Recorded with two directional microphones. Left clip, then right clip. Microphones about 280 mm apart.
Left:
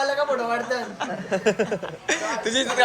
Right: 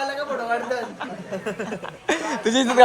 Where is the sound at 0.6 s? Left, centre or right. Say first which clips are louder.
Even; centre.